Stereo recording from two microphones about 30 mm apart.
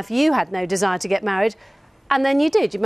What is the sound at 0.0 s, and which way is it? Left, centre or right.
A woman's voice, centre.